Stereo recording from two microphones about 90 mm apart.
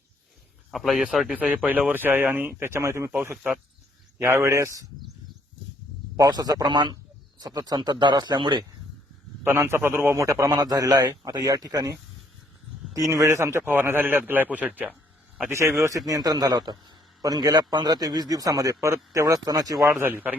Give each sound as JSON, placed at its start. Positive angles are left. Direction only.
{"t": 0.7, "sound": "speech", "side_deg": 0}
{"t": 1.6, "sound": "a man's voice", "side_deg": -20}
{"t": 4.2, "sound": "a man's voice", "side_deg": -25}
{"t": 6.1, "sound": "a man's voice", "side_deg": -45}
{"t": 9.4, "sound": "a man's voice", "side_deg": -30}
{"t": 15.4, "sound": "a man's voice", "side_deg": -30}
{"t": 16.0, "sound": "a man's voice", "side_deg": -45}
{"t": 20.0, "sound": "a man's voice", "side_deg": -20}